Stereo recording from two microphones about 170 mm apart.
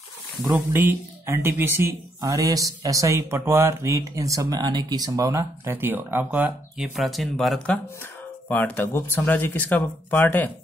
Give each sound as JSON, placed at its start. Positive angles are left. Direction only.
{"t": 0.7, "sound": "speech", "side_deg": -15}
{"t": 7.0, "sound": "speech", "side_deg": 0}